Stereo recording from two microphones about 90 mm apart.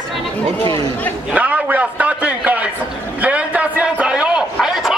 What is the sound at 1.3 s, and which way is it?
A man's voice, 15° right (ahead or behind).